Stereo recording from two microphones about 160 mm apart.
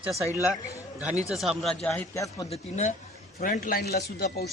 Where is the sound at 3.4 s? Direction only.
60° left (ahead or behind); by 4.4 s 80° left.